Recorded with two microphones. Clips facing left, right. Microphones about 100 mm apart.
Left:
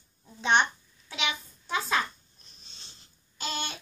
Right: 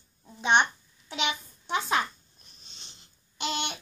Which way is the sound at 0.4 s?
15° right (ahead or behind).